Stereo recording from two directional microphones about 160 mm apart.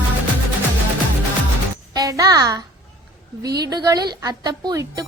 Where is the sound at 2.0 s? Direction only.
20° right (ahead or behind).